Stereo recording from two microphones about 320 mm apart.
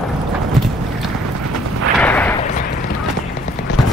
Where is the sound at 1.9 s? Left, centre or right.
Centre.